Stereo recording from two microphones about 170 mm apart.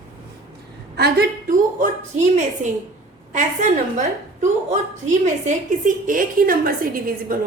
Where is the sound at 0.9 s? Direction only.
70° right (ahead or behind).